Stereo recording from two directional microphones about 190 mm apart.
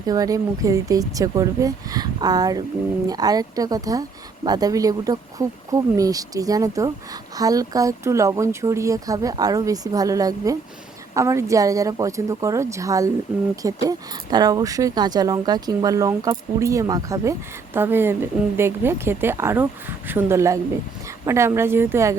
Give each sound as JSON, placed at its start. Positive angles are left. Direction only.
{"t": 0.0, "sound": "speech", "side_deg": -20}